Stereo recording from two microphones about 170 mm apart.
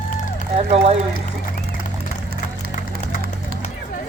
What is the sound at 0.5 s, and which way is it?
Speech, 40° right (ahead or behind).